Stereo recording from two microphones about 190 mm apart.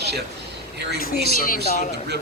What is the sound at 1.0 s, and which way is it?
Speech, 50° left (ahead or behind).